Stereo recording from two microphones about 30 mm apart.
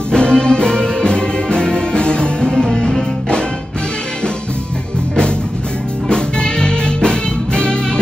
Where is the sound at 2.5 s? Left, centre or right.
Centre.